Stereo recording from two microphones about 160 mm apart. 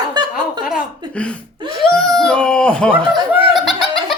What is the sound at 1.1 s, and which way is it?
Speech, 5° left (ahead or behind).